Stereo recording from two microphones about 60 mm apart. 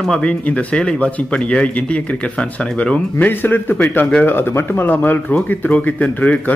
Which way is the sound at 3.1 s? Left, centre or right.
Left.